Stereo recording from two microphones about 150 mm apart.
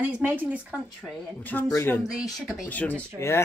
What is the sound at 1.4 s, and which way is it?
Speech, 10° left (ahead or behind).